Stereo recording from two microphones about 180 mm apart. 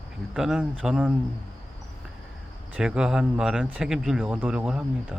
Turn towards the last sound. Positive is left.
turn(degrees=-5)  # may be behind; listen again after turning